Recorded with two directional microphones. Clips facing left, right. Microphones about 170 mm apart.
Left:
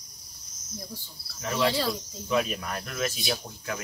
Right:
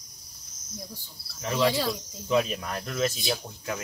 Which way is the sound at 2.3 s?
25° right (ahead or behind).